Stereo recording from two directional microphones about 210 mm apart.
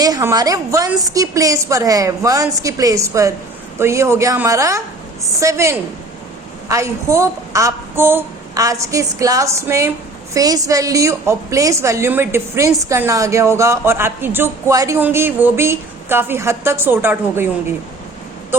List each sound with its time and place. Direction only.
0.0 s a woman's voice: 15° right (ahead or behind)